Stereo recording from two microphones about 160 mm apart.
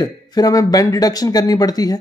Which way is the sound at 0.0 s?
25° left (ahead or behind).